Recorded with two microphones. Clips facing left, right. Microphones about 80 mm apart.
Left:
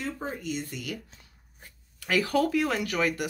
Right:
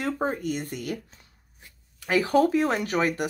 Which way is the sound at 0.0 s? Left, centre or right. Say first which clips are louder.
Right 7 dB; right.